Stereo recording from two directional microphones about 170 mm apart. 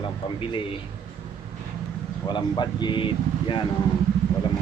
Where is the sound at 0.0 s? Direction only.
30° left (ahead or behind).